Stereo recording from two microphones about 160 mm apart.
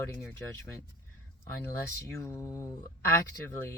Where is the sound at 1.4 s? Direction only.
15° left (ahead or behind).